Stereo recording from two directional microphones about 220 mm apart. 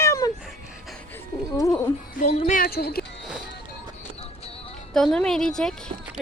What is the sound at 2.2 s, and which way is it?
Speech, 30° left (ahead or behind).